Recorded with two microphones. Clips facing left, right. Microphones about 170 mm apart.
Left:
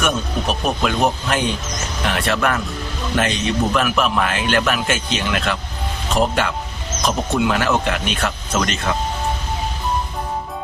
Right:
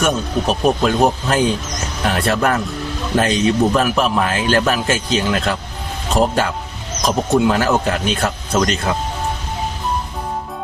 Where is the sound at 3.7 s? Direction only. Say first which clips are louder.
Right 2 dB; 35° right (ahead or behind).